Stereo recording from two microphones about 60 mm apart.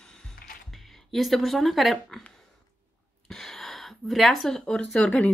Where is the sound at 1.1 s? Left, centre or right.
Centre.